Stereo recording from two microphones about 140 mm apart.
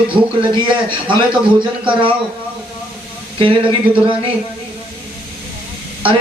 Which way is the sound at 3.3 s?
35° right (ahead or behind).